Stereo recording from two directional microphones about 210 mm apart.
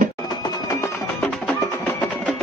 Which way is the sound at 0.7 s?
5° left (ahead or behind).